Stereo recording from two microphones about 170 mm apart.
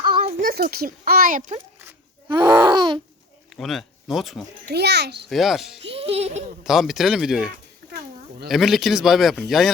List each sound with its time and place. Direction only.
0.0 s a sound: 30° right (ahead or behind)
0.3 s speech: 55° right (ahead or behind)
2.3 s a sound: 25° right (ahead or behind)
3.5 s speech: centre (ahead or behind)
4.7 s a child's voice: 75° right (ahead or behind)
5.3 s speech: centre (ahead or behind)
5.8 s speech: 35° right (ahead or behind)
6.7 s speech: centre (ahead or behind)